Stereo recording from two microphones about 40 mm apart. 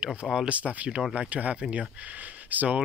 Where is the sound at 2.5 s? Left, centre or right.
Right.